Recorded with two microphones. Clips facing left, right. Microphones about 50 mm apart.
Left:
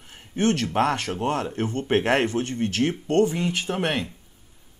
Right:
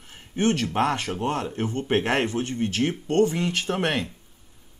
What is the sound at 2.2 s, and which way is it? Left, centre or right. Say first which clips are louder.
Speech: left 1 dB; right.